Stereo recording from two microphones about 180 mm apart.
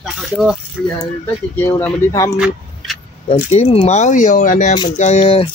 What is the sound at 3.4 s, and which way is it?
Speech, 35° left (ahead or behind).